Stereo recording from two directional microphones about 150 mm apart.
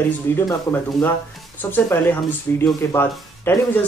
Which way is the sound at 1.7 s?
15° left (ahead or behind).